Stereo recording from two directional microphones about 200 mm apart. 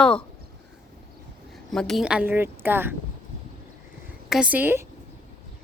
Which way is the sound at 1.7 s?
Centre (ahead or behind).